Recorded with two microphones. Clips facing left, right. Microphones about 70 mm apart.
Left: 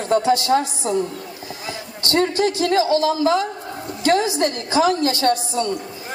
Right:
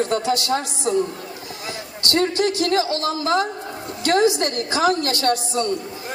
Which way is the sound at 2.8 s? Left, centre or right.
Right.